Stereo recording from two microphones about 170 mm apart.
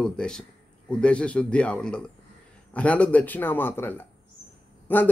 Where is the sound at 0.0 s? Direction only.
5° left (ahead or behind).